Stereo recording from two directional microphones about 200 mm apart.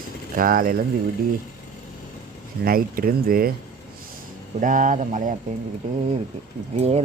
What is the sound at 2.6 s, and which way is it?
Speech, 45° right (ahead or behind).